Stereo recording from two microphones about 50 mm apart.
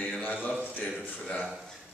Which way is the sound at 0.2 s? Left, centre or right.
Left.